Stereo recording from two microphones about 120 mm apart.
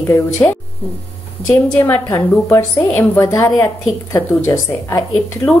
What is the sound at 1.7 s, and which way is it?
A woman's voice, 15° left (ahead or behind).